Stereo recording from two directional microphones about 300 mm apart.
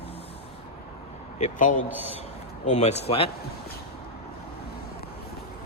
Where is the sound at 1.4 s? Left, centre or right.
Left.